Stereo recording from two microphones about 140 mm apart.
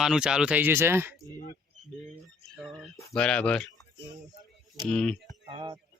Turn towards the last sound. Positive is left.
turn(degrees=-40)  # may be behind; listen again after turning